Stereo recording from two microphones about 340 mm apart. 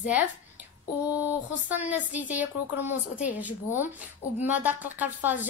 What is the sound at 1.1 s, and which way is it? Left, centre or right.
Speech, centre.